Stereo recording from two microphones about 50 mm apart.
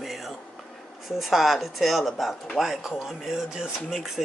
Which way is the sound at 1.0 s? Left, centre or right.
Centre.